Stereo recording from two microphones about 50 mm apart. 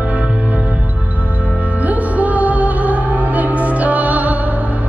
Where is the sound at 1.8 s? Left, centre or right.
Right.